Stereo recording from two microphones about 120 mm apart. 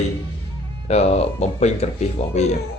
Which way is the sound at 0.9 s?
60° left (ahead or behind).